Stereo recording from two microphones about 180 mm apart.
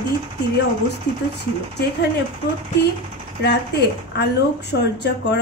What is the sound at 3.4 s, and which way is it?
A woman's voice, 65° left (ahead or behind).